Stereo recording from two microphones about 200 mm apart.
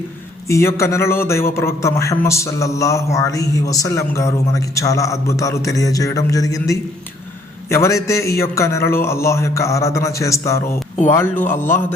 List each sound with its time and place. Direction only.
0.4 s a man's voice: 15° left (ahead or behind)